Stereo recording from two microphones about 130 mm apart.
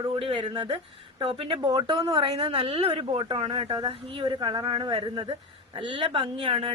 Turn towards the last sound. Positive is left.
turn(degrees=-45)  # may be behind; listen again after turning